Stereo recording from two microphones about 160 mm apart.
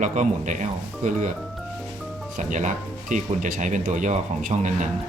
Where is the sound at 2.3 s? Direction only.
50° right (ahead or behind).